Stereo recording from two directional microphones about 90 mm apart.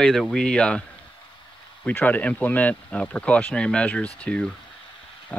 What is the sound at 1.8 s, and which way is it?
Speech, 20° left (ahead or behind).